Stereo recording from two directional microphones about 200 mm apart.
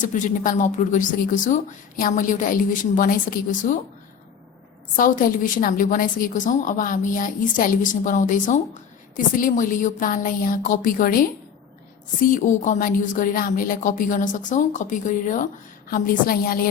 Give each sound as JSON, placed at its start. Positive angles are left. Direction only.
{"t": 0.0, "sound": "a woman's voice", "side_deg": 40}
{"t": 4.9, "sound": "a woman's voice", "side_deg": 40}
{"t": 12.2, "sound": "a woman's voice", "side_deg": 40}